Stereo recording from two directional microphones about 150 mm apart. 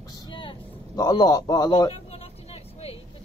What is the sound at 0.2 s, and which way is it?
Vehicle, 35° left (ahead or behind).